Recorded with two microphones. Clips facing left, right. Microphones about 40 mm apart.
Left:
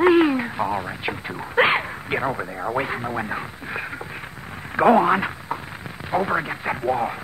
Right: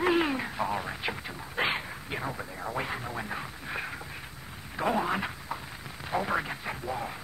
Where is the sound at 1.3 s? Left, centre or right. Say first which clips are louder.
Left 13 dB; left.